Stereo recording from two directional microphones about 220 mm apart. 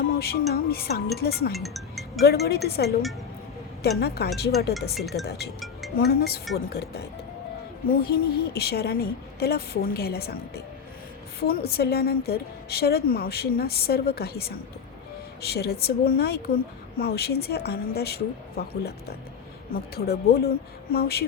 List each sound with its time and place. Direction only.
0.1 s a woman's voice: 45° left (ahead or behind)
1.5 s music: centre (ahead or behind)
2.2 s a woman's voice: 45° left (ahead or behind)
4.9 s speech: centre (ahead or behind)
5.2 s a woman's voice: 50° left (ahead or behind)